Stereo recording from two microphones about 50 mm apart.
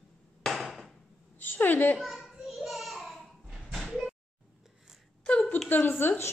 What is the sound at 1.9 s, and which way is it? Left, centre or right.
Speech, centre.